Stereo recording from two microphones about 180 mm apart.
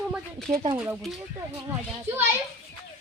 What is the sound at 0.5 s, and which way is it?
Speech, 35° right (ahead or behind).